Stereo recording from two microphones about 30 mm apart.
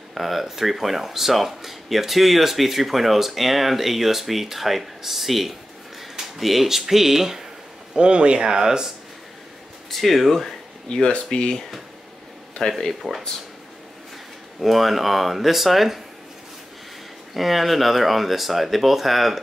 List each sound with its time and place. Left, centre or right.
0.1 s speech: centre
7.9 s speech: right
9.9 s speech: centre
10.9 s speech: left
12.6 s speech: centre
14.6 s speech: centre
17.3 s speech: centre